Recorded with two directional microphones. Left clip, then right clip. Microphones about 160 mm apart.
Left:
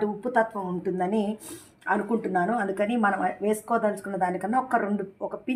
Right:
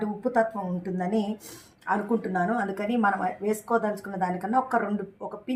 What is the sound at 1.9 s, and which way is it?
Speech, 25° left (ahead or behind).